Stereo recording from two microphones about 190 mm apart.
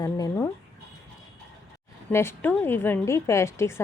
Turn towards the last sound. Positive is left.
turn(degrees=15)  # may be behind; listen again after turning